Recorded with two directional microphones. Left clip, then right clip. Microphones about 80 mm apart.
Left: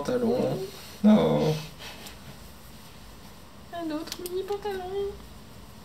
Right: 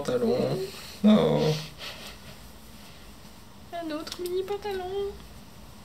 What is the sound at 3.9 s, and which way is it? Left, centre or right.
Speech, right.